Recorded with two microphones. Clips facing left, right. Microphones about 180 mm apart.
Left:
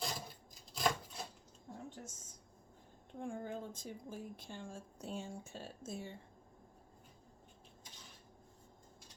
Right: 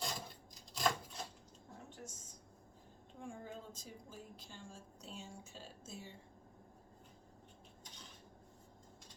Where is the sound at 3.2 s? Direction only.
55° left (ahead or behind).